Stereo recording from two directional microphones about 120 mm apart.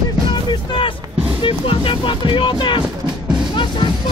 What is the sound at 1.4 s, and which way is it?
Speech, 45° left (ahead or behind).